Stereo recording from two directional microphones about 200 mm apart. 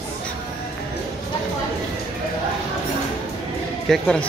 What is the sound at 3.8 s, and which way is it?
Speech, 5° left (ahead or behind).